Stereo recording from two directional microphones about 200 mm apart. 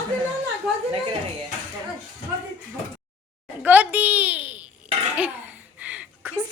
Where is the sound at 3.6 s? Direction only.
5° right (ahead or behind).